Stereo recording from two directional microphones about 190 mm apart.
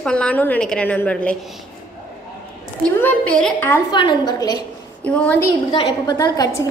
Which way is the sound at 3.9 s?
25° left (ahead or behind).